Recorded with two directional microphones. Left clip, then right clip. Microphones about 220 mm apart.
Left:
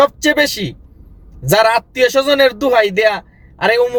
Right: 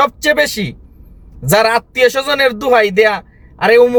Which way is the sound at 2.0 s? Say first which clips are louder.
Left 1 dB; 10° right (ahead or behind).